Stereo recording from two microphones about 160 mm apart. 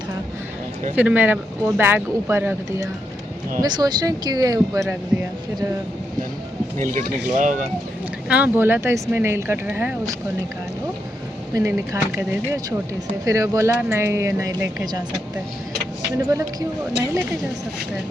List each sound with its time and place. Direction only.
0.9 s speech: 10° right (ahead or behind)
3.6 s speech: 25° right (ahead or behind)
6.8 s speech: 55° right (ahead or behind)
8.3 s speech: 10° right (ahead or behind)
11.5 s speech: 20° right (ahead or behind)
13.2 s speech: 20° right (ahead or behind)
16.1 s speech: 20° right (ahead or behind)